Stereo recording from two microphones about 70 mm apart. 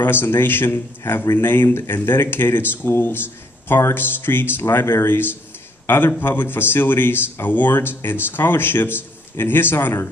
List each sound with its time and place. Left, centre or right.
0.0 s a man's voice: left